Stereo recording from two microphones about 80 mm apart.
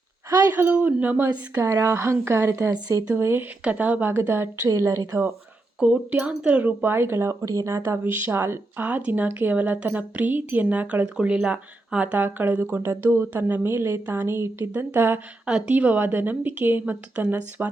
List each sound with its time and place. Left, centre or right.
0.3 s speech: right
0.5 s speech: right
1.6 s speech: right
3.6 s speech: centre
4.8 s speech: right
5.8 s speech: centre; by 7.3 s right
7.4 s speech: right
8.9 s speech: centre
15.4 s speech: centre
15.7 s speech: right